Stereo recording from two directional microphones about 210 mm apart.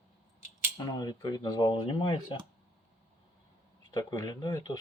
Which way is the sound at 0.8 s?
20° left (ahead or behind).